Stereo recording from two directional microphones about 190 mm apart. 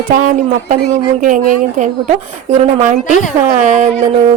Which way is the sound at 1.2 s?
40° right (ahead or behind).